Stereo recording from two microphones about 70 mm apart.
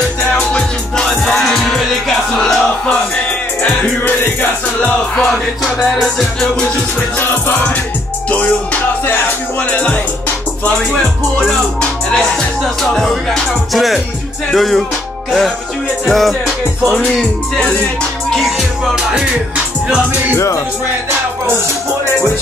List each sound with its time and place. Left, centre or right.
0.3 s music: centre
2.9 s music: centre
4.0 s music: left
5.6 s speech: centre
9.7 s music: centre
10.9 s music: centre
12.8 s speech: centre
16.1 s speech: centre
20.3 s speech: left